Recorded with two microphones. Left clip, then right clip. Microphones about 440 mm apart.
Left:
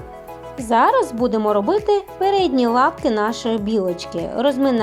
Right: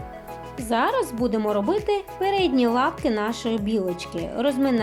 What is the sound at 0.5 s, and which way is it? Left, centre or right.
Speech, centre.